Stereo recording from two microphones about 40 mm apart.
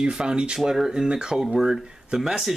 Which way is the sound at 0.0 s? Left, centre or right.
Centre.